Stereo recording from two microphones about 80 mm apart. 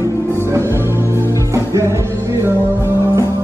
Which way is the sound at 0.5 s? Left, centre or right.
Right.